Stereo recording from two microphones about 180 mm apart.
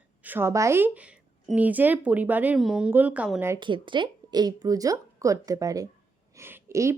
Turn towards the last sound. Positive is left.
turn(degrees=-15)  # may be behind; listen again after turning